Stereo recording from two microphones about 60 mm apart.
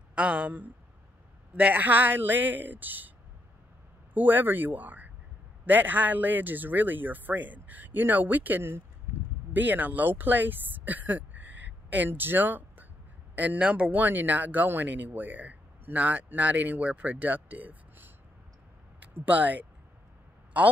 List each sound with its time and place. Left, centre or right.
0.1 s speech: centre
4.1 s speech: right
13.9 s speech: right
19.1 s speech: right